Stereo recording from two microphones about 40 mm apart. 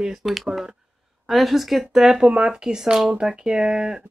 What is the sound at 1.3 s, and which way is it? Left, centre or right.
Speech, centre.